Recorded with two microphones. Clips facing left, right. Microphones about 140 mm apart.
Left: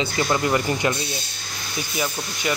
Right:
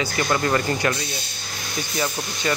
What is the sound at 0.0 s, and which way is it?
Speech, 15° left (ahead or behind).